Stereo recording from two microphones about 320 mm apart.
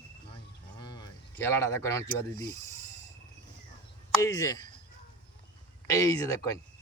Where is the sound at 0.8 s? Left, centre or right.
Centre.